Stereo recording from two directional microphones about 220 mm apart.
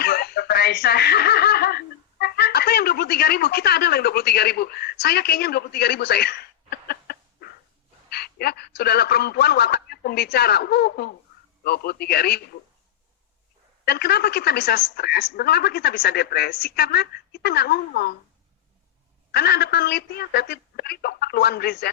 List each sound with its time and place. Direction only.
0.0 s snicker: 45° left (ahead or behind)
8.1 s a man's voice: 45° left (ahead or behind)
13.8 s a woman's voice: 45° left (ahead or behind)
19.3 s a woman's voice: 45° left (ahead or behind)